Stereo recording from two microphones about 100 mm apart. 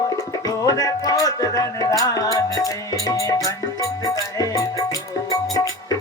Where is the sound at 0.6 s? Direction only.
35° left (ahead or behind).